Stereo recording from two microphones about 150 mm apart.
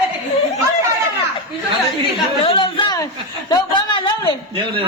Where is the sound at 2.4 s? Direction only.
35° left (ahead or behind).